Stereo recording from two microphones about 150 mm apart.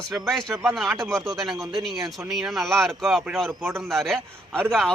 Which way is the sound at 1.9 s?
20° right (ahead or behind).